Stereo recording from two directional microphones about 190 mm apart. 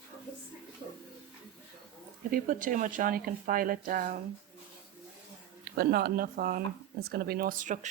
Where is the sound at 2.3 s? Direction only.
45° right (ahead or behind).